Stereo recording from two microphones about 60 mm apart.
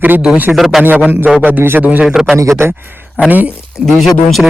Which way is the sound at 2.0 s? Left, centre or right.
Centre.